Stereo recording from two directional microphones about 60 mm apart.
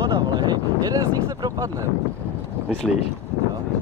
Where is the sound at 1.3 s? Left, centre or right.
Right.